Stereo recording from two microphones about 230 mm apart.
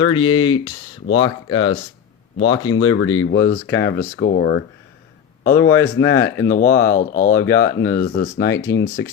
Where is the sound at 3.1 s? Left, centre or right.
Left.